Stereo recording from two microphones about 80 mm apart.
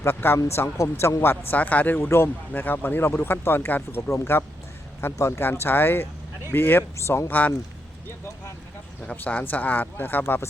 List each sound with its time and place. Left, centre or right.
0.0 s speech: left
2.0 s speech: left
9.0 s speech: centre